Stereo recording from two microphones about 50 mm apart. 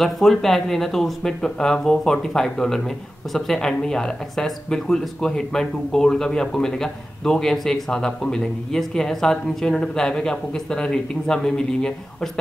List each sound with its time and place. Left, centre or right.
0.0 s speech: centre